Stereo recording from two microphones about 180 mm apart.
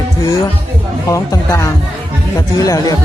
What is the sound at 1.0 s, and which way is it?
Speech, 15° left (ahead or behind).